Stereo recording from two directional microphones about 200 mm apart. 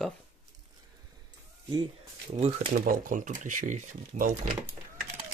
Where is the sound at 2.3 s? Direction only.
30° right (ahead or behind).